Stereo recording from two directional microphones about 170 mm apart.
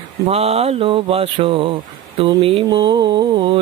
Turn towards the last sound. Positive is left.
turn(degrees=-30)  # may be behind; listen again after turning